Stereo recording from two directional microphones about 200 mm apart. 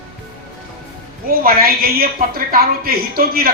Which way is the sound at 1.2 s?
45° right (ahead or behind).